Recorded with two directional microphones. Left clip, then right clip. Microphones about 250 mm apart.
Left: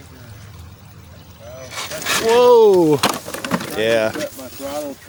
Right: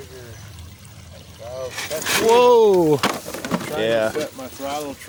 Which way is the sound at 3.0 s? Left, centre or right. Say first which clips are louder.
Left 3 dB; left.